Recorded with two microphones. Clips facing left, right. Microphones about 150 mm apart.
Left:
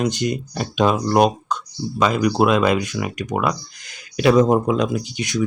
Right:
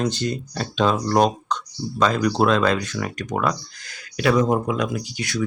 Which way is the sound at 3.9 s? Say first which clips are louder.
Left 4 dB; 20° left (ahead or behind).